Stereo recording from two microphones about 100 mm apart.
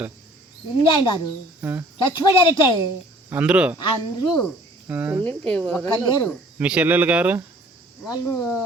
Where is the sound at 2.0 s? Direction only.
55° left (ahead or behind).